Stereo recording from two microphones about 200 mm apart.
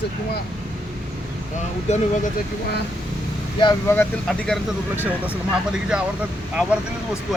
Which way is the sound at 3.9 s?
10° left (ahead or behind).